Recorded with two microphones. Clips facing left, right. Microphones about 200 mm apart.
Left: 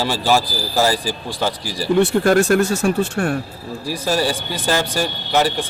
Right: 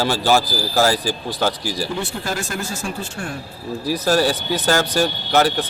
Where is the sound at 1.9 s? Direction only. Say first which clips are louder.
Left 12 dB; 65° left (ahead or behind).